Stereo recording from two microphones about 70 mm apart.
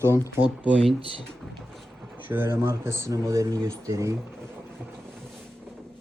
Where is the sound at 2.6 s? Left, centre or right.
Right.